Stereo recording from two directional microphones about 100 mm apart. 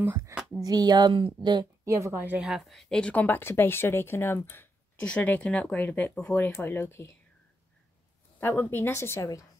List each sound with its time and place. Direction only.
0.0 s speech: 20° right (ahead or behind)
0.6 s speech: 40° right (ahead or behind)
2.2 s speech: 15° right (ahead or behind)
2.5 s a woman's voice: centre (ahead or behind); by 7.1 s 25° left (ahead or behind)
8.4 s a woman's voice: 25° left (ahead or behind)